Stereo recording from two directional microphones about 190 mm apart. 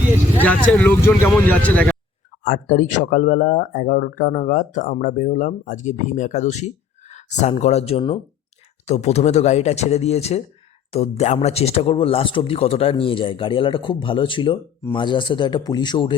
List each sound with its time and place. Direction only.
0.4 s speech: 5° left (ahead or behind)
2.4 s speech: 45° left (ahead or behind)
7.1 s a sound: 40° left (ahead or behind)
7.6 s a man's voice: 35° left (ahead or behind)